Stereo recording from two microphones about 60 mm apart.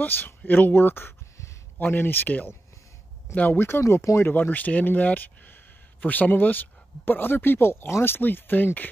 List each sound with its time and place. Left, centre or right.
0.0 s speech: left
3.8 s speech: left
4.2 s speech: left